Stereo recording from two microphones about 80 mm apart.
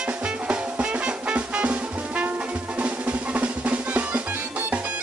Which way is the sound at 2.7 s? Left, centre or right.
Centre.